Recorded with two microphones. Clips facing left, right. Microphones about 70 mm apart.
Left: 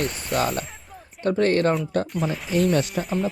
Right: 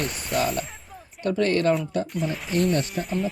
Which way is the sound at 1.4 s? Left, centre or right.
Left.